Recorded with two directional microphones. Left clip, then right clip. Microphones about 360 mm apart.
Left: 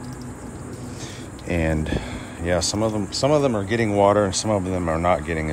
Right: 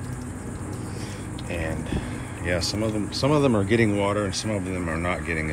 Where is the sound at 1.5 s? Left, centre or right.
Left.